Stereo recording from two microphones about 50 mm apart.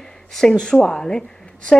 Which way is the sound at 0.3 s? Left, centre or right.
Centre.